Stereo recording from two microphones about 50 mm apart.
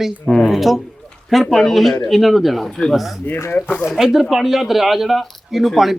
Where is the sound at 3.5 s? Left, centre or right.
Left.